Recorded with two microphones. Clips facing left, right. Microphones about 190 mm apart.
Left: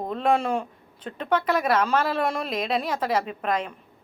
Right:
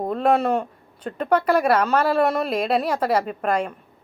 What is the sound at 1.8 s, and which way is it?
A woman's voice, 5° right (ahead or behind).